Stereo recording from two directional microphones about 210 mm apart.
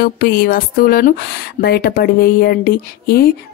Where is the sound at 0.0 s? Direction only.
45° left (ahead or behind).